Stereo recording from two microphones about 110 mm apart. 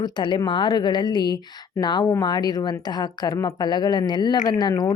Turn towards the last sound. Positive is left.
turn(degrees=35)  # may be behind; listen again after turning